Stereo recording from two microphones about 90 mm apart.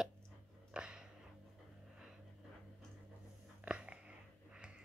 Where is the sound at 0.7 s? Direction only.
10° right (ahead or behind).